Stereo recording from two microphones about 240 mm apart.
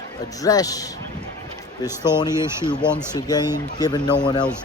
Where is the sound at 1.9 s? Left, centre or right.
Centre.